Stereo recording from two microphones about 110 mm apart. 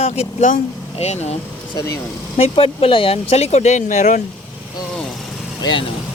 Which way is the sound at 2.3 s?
65° left (ahead or behind).